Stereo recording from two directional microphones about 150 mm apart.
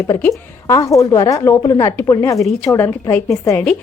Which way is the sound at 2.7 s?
15° left (ahead or behind).